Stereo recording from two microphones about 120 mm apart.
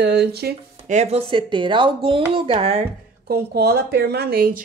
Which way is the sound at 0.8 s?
65° right (ahead or behind).